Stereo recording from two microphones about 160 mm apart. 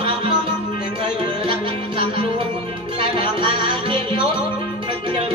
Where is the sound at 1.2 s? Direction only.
30° right (ahead or behind).